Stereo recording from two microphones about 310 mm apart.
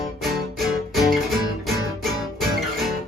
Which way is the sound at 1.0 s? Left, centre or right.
Centre.